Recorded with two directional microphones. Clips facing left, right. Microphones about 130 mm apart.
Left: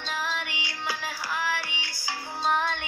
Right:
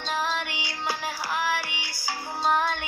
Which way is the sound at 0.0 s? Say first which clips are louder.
Right 4 dB; 30° right (ahead or behind).